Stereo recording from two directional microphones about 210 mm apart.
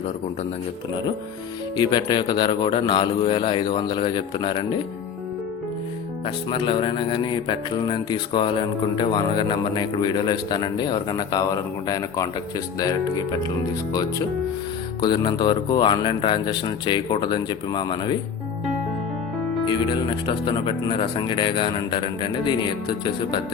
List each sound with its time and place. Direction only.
1.7 s a man's voice: 20° left (ahead or behind)
6.2 s a man's voice: 25° left (ahead or behind)
15.0 s a man's voice: 20° left (ahead or behind)
19.6 s a man's voice: 20° left (ahead or behind)